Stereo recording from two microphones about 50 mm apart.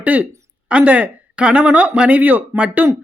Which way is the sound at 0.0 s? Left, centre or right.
Right.